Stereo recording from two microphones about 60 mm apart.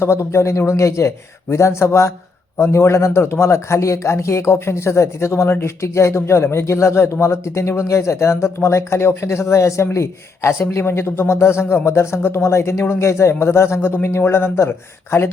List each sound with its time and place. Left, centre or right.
0.0 s speech: left